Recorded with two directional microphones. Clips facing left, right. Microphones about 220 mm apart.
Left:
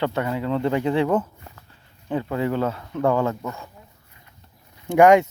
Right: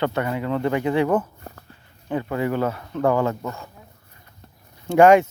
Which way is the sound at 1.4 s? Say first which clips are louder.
Right 5 dB; 45° right (ahead or behind).